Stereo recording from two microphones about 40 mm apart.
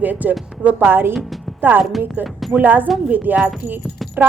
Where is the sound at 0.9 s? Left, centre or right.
Right.